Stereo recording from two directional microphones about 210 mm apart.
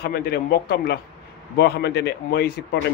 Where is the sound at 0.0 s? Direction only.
45° left (ahead or behind).